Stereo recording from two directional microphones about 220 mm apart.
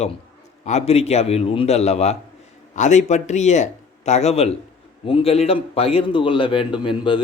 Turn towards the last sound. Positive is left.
turn(degrees=20)  # may be behind; listen again after turning